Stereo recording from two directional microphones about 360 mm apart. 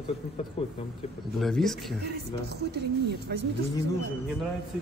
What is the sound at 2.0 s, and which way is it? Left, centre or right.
Speech, right.